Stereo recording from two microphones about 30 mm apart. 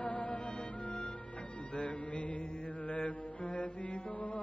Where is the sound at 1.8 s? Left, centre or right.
Left.